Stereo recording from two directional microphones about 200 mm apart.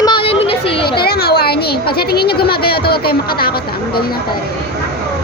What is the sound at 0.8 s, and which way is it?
Speech, 50° left (ahead or behind).